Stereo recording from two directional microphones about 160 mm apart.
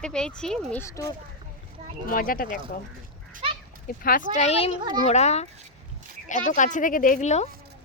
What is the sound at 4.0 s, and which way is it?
Speech, 60° left (ahead or behind).